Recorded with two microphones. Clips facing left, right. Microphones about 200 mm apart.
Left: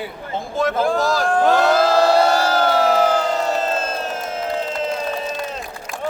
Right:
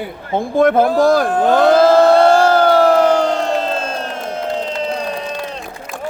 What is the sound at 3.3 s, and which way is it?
Crowd, 5° left (ahead or behind).